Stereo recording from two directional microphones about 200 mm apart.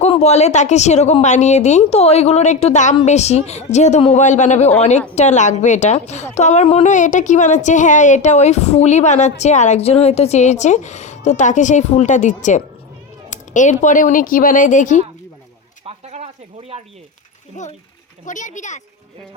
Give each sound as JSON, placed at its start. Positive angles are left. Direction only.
{"t": 0.0, "sound": "speech", "side_deg": 35}
{"t": 15.9, "sound": "a sound", "side_deg": -30}
{"t": 17.6, "sound": "speech", "side_deg": 40}